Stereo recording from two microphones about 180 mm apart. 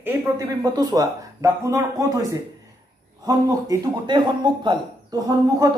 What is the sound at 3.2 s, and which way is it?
A man's voice, 20° right (ahead or behind).